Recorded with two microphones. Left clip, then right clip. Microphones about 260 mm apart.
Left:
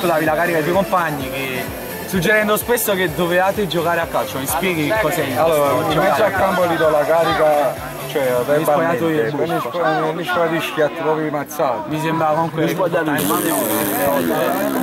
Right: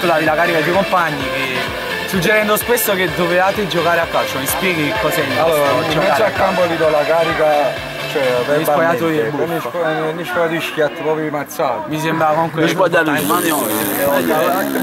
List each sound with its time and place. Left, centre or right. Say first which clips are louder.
0.0 s speech: right 3 dB; centre
2.2 s speech: right 1 dB; centre
11.6 s speech: right 1 dB; centre
14.0 s speech: right 5 dB; right